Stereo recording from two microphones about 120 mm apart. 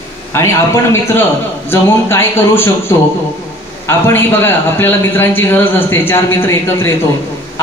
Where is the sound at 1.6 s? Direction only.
20° left (ahead or behind).